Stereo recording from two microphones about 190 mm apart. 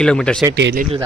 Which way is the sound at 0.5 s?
65° right (ahead or behind).